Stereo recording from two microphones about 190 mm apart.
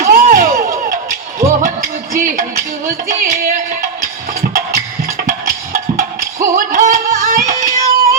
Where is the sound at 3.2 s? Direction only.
45° right (ahead or behind).